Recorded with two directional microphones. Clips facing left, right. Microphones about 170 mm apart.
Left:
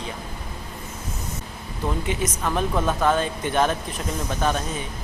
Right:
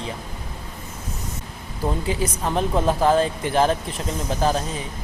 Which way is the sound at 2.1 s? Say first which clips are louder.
Right 1 dB; 30° right (ahead or behind).